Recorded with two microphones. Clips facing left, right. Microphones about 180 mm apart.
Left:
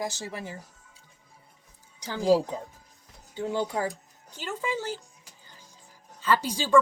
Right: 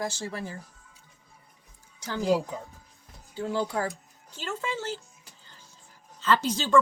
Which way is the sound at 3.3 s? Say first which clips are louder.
Even; 20° left (ahead or behind).